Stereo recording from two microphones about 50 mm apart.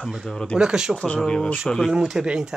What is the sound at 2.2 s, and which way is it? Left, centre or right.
Speech, centre.